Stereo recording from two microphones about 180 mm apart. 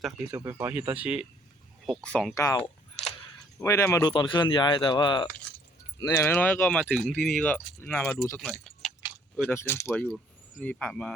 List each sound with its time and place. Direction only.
0.3 s speech: 15° right (ahead or behind)
2.0 s speech: 5° left (ahead or behind)
2.4 s speech: 20° left (ahead or behind)
8.4 s speech: 5° left (ahead or behind)
9.5 s speech: 15° left (ahead or behind)